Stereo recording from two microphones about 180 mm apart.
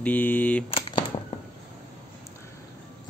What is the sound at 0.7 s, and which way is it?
Shuffling cards, 30° left (ahead or behind).